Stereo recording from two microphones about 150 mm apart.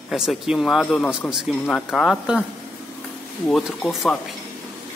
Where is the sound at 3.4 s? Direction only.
Centre (ahead or behind).